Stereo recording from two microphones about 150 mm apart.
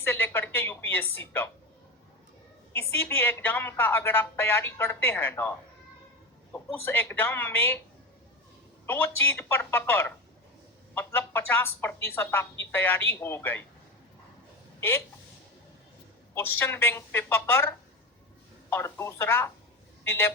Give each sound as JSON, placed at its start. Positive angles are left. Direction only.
{"t": 0.0, "sound": "a woman's voice", "side_deg": 15}
{"t": 2.7, "sound": "a woman's voice", "side_deg": 15}
{"t": 8.9, "sound": "a woman's voice", "side_deg": 15}
{"t": 14.8, "sound": "speech", "side_deg": 15}
{"t": 16.3, "sound": "a woman's voice", "side_deg": 15}